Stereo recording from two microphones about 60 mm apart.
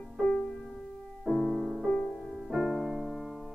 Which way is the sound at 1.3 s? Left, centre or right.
Centre.